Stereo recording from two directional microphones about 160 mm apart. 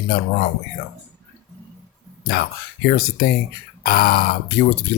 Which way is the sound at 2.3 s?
65° left (ahead or behind).